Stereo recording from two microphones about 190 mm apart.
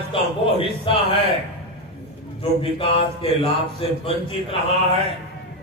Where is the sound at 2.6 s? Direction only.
30° left (ahead or behind).